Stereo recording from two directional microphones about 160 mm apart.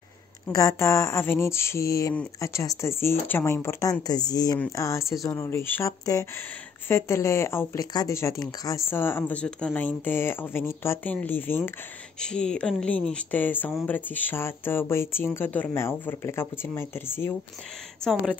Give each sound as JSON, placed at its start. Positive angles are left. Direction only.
{"t": 0.5, "sound": "speech", "side_deg": 20}
{"t": 18.0, "sound": "speech", "side_deg": 5}